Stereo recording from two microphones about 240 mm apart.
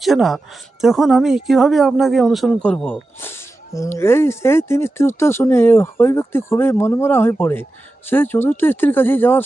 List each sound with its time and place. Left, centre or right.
0.0 s speech: centre